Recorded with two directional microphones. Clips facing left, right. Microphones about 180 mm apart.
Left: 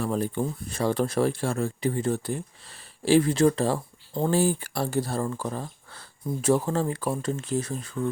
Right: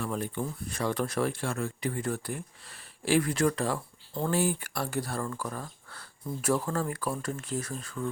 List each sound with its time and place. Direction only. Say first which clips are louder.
0.0 s speech: left 6 dB; 35° left (ahead or behind)